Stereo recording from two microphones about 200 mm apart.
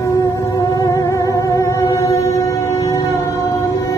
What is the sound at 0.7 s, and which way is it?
Music, 15° left (ahead or behind).